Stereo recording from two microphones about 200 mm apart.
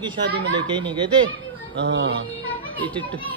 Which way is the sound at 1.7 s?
60° right (ahead or behind).